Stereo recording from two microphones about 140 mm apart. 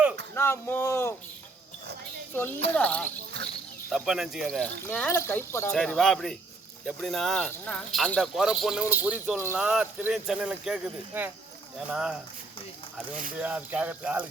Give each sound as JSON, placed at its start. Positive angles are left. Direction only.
{"t": 0.3, "sound": "speech", "side_deg": 20}
{"t": 2.3, "sound": "speech", "side_deg": 15}
{"t": 3.9, "sound": "speech", "side_deg": -5}
{"t": 5.7, "sound": "speech", "side_deg": 0}
{"t": 13.4, "sound": "speech", "side_deg": -10}